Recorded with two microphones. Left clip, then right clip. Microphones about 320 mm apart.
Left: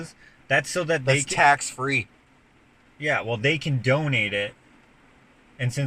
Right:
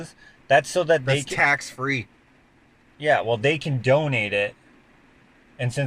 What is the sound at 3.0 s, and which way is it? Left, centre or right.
Speech, right.